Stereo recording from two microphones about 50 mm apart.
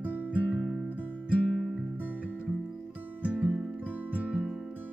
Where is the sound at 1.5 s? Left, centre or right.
Centre.